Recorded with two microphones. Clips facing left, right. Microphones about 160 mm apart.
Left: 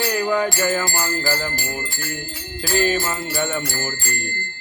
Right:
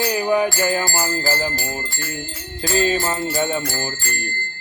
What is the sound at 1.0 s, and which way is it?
Jingle bell, 25° right (ahead or behind).